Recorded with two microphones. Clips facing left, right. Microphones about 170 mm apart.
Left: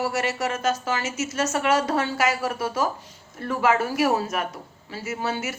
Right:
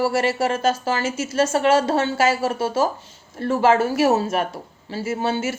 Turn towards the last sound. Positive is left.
turn(degrees=-30)  # may be behind; listen again after turning